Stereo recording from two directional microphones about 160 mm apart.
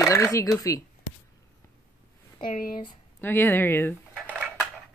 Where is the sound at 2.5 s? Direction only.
60° left (ahead or behind).